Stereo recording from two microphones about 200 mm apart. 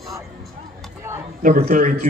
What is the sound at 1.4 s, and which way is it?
Speech, 40° right (ahead or behind).